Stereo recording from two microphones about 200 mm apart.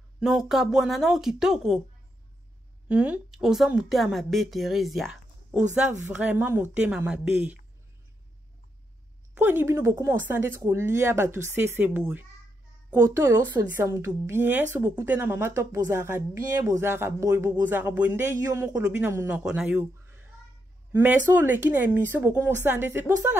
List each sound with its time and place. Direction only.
0.2 s a woman's voice: centre (ahead or behind)
2.9 s a woman's voice: 5° right (ahead or behind)
9.4 s speech: 10° right (ahead or behind)